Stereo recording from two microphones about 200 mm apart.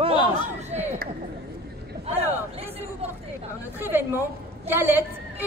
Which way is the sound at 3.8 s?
10° right (ahead or behind).